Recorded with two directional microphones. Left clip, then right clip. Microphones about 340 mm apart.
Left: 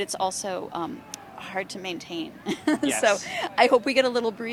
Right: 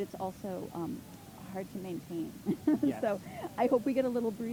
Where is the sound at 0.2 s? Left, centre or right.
Centre.